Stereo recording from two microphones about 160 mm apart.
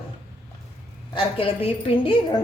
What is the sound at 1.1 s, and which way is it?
A woman's voice, 35° left (ahead or behind).